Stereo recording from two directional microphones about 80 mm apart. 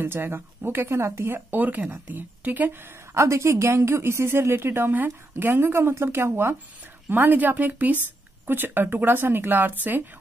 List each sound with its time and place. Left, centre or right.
0.0 s speech: right